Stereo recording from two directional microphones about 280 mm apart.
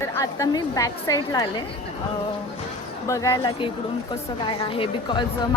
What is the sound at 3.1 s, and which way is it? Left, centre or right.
A woman's voice, centre.